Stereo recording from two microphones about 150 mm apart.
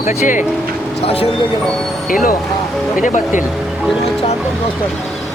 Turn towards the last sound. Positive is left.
turn(degrees=60)  # may be behind; listen again after turning